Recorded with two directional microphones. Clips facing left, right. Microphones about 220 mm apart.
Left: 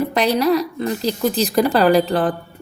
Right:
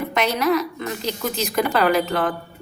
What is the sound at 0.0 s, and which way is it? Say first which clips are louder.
A woman's voice: left 4 dB; 35° left (ahead or behind).